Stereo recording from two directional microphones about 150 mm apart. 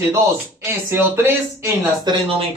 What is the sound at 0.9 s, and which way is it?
Speech, 15° right (ahead or behind).